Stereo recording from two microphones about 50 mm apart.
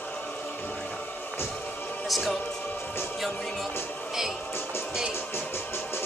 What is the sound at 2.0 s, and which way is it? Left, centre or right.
Speech, centre.